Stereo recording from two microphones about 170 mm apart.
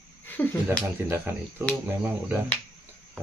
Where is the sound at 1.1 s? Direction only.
15° right (ahead or behind).